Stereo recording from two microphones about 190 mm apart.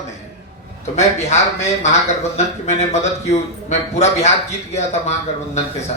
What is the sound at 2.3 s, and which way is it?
Speech, 35° left (ahead or behind).